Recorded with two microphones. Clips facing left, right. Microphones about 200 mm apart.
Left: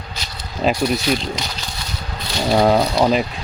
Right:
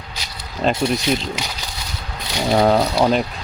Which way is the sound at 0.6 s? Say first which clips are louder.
Left 1 dB; 5° left (ahead or behind).